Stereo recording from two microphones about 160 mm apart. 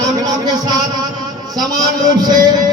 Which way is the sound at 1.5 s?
25° right (ahead or behind).